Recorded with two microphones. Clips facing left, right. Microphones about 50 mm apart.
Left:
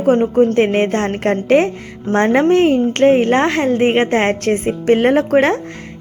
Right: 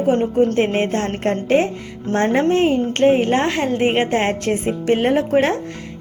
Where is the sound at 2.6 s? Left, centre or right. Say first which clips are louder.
Left 3 dB; left.